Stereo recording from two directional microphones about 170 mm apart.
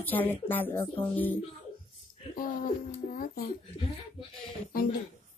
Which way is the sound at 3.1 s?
60° left (ahead or behind).